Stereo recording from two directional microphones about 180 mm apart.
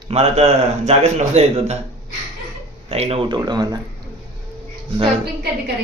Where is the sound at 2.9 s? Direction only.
35° right (ahead or behind).